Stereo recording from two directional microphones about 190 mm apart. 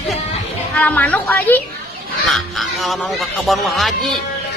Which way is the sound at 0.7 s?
10° left (ahead or behind).